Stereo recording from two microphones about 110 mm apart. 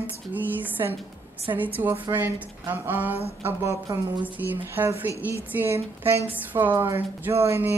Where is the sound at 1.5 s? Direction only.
35° right (ahead or behind).